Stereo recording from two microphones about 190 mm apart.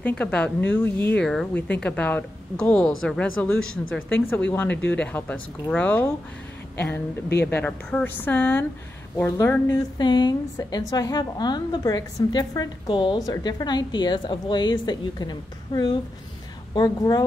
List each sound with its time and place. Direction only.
0.0 s speech: 5° left (ahead or behind)
3.5 s speech: 90° left
3.9 s speech: 10° left (ahead or behind)
7.4 s a woman's voice: 10° left (ahead or behind)